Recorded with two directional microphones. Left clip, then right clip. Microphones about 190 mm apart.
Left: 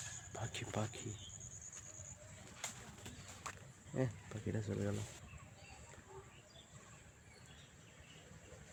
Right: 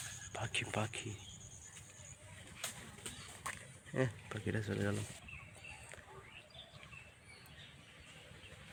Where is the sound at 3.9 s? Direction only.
Centre (ahead or behind).